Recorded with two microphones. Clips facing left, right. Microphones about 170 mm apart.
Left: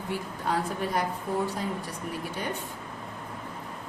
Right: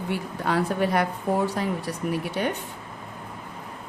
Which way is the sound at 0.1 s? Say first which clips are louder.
Right 3 dB; 70° right (ahead or behind).